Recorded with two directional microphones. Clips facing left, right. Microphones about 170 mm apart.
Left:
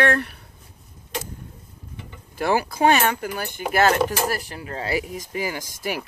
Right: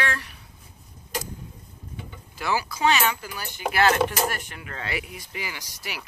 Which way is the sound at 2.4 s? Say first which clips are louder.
Left 6 dB; 50° left (ahead or behind).